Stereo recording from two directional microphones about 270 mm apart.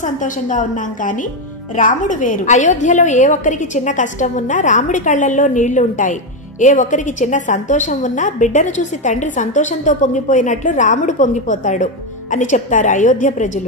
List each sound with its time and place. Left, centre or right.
0.0 s a woman's voice: left